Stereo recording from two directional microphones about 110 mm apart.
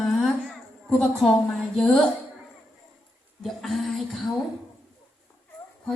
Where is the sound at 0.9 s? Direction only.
5° left (ahead or behind).